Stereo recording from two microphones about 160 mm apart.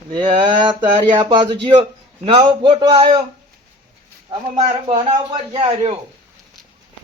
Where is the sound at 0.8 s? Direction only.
30° right (ahead or behind).